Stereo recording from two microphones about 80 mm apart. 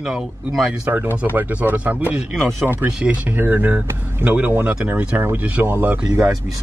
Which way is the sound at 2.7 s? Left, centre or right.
Centre.